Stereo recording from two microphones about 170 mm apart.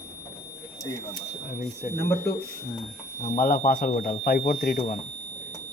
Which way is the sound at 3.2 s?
55° left (ahead or behind).